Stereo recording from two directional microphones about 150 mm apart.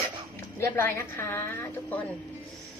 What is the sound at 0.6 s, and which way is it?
A woman's voice, 15° left (ahead or behind).